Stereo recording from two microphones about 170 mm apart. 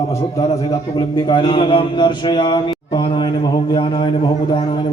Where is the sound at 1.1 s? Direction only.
25° left (ahead or behind).